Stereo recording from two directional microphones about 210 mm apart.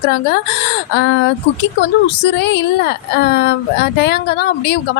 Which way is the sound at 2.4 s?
55° left (ahead or behind).